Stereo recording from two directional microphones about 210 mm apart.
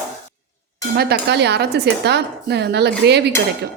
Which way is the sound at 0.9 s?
50° right (ahead or behind).